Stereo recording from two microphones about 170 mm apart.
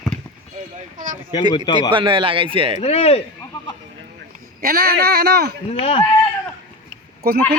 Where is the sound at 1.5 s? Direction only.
25° left (ahead or behind).